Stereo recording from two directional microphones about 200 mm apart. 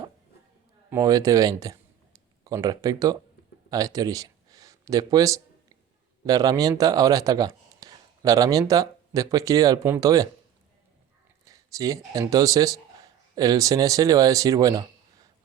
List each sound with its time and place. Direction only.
0.9 s speech: 15° right (ahead or behind)
3.7 s a sound: 15° right (ahead or behind)
6.2 s speech: 20° right (ahead or behind)
11.4 s a man's voice: 15° right (ahead or behind)